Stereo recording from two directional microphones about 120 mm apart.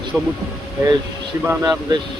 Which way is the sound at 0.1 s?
10° right (ahead or behind).